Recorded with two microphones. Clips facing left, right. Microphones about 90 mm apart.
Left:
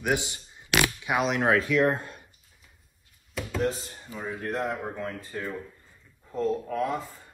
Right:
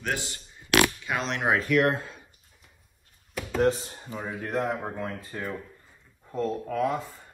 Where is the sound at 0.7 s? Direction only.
Centre (ahead or behind).